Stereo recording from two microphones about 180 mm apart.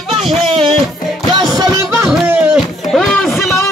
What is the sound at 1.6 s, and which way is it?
Music, 15° right (ahead or behind).